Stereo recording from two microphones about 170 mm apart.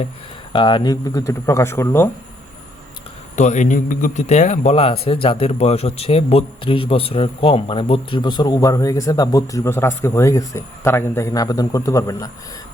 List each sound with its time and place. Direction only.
0.5 s speech: 25° left (ahead or behind)
3.3 s a man's voice: 45° left (ahead or behind); by 12.3 s 20° left (ahead or behind)